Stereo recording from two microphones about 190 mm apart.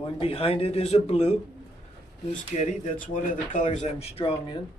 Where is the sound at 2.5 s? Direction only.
40° left (ahead or behind).